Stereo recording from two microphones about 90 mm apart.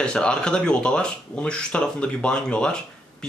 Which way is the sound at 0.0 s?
10° left (ahead or behind).